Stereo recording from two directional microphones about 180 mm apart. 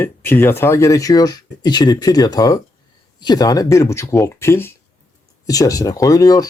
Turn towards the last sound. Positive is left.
turn(degrees=20)  # may be behind; listen again after turning